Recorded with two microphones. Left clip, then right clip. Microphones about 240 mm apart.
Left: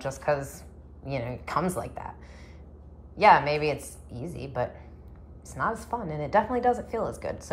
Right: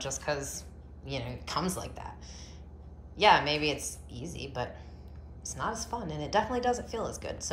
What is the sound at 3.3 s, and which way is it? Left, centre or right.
Speech, right.